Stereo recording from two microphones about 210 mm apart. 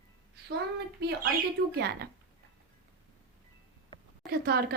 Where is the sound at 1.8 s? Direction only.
50° right (ahead or behind).